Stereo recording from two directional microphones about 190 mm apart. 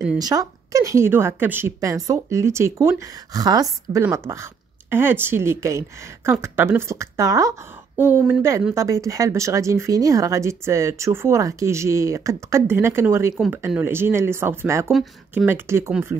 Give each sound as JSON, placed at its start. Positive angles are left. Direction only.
{"t": 0.2, "sound": "a woman's voice", "side_deg": -20}